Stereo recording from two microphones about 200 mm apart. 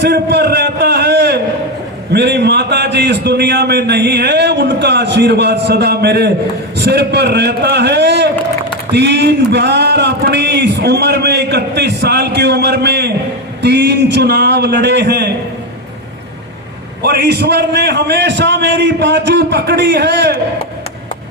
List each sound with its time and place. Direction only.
0.0 s a sound: 55° right (ahead or behind)
2.1 s a man's voice: 55° right (ahead or behind)
17.0 s a man's voice: 55° right (ahead or behind)